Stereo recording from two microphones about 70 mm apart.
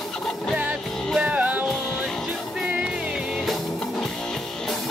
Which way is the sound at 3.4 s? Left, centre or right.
Centre.